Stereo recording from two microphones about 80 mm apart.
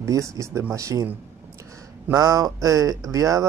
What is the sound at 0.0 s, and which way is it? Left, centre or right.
Speech, right.